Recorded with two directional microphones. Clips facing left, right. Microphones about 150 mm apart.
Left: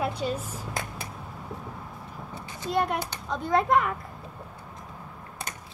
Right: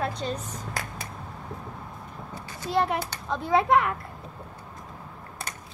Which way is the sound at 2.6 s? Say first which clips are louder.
Right 1 dB; centre (ahead or behind).